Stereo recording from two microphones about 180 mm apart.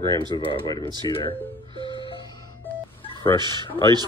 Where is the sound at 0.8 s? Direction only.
25° right (ahead or behind).